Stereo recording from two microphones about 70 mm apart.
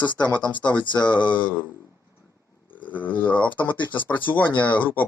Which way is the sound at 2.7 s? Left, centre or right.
Left.